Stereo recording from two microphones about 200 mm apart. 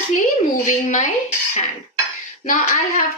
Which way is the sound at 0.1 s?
40° left (ahead or behind).